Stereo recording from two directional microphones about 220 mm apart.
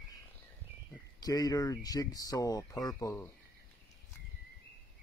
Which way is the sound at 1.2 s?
15° left (ahead or behind).